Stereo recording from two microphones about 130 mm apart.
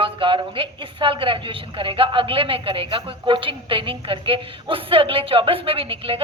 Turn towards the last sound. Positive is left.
turn(degrees=-45)  # may be behind; listen again after turning